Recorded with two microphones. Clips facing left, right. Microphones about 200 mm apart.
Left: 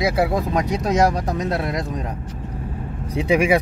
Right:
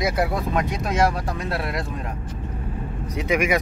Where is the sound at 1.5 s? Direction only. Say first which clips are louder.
Left 4 dB; 20° left (ahead or behind).